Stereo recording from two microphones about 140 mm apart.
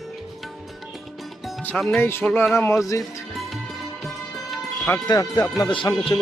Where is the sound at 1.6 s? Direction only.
5° left (ahead or behind).